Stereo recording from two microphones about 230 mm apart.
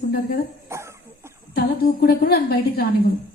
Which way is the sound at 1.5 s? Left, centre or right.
Left.